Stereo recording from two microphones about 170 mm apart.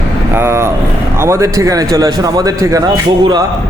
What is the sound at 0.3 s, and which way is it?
Vehicle, 15° right (ahead or behind).